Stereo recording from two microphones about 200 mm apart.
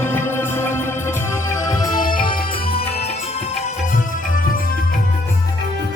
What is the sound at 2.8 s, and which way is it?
Music, 30° left (ahead or behind).